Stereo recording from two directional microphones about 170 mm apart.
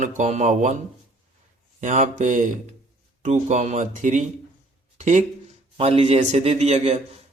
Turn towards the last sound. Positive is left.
turn(degrees=-40)  # may be behind; listen again after turning